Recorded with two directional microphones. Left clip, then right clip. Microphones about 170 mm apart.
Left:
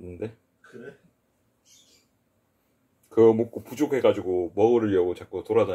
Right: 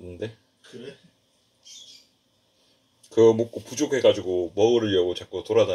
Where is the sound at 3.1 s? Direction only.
25° left (ahead or behind).